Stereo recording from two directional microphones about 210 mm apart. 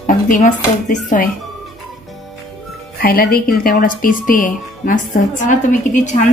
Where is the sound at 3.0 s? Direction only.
45° left (ahead or behind).